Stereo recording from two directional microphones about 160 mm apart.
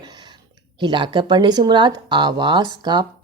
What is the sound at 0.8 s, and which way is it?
Speech, 30° right (ahead or behind).